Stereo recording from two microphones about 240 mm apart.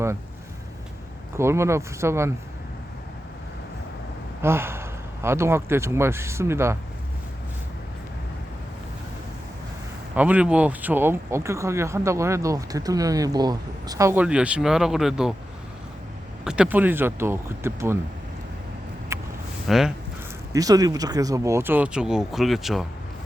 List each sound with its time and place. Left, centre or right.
1.4 s speech: centre
4.4 s speech: centre
10.2 s speech: centre
16.4 s speech: centre
19.1 s a sound: centre
19.6 s speech: centre
20.5 s speech: centre